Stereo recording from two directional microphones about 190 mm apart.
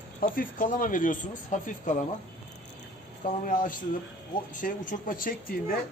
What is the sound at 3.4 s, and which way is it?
Speech, 45° left (ahead or behind).